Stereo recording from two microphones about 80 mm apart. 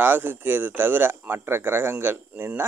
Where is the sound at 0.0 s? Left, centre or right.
Right.